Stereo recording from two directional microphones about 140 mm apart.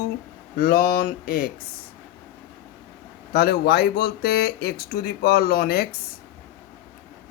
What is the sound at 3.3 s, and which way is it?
Speech, 90° left.